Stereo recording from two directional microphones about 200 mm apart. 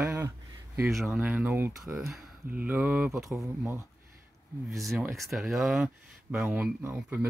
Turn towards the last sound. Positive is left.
turn(degrees=-10)  # may be behind; listen again after turning